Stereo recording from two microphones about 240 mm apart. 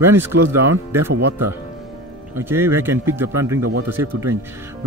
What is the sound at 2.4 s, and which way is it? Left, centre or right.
Speech, centre.